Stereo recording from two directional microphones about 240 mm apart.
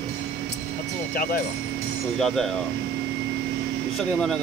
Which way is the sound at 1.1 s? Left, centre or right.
Left.